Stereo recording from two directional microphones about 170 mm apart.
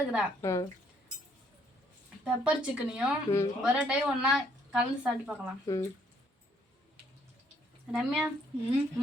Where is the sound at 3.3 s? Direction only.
35° left (ahead or behind).